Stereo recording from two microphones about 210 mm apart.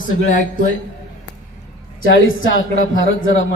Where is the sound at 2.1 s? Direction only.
70° left (ahead or behind).